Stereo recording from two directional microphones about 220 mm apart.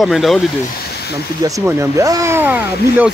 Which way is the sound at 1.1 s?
15° right (ahead or behind).